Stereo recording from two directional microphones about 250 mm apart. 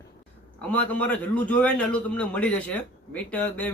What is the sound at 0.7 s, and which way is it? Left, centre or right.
A man's voice, centre.